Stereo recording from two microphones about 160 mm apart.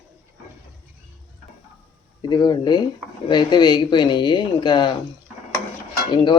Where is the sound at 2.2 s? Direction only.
25° left (ahead or behind).